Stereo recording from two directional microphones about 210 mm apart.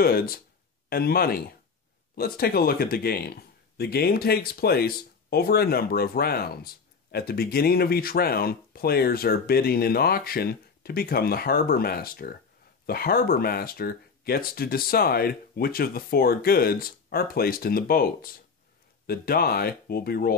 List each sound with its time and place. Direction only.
0.0 s speech: 45° left (ahead or behind)